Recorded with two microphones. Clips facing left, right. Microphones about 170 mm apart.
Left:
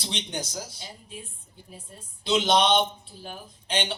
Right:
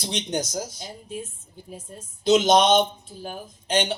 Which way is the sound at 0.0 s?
45° right (ahead or behind).